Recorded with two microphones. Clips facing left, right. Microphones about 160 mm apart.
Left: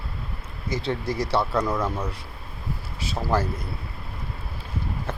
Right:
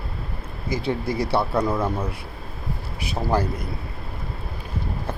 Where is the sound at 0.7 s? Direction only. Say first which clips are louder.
Right 2 dB; 10° right (ahead or behind).